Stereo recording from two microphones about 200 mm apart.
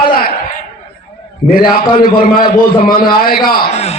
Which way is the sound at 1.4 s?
Centre (ahead or behind).